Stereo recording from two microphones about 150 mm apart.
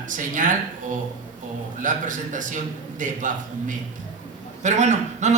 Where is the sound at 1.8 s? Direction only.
60° right (ahead or behind).